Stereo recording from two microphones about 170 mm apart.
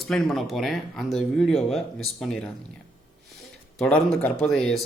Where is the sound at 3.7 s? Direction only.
5° left (ahead or behind).